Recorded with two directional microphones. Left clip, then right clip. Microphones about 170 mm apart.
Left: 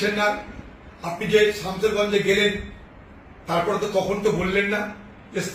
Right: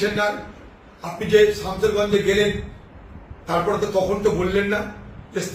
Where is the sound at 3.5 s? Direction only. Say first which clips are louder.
Right 2 dB; 15° right (ahead or behind).